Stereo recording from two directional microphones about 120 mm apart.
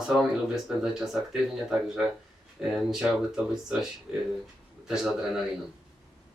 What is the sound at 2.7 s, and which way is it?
Speech, 5° right (ahead or behind).